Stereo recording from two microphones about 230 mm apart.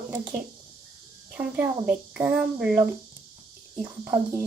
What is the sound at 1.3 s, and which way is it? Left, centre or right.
A child's voice, centre.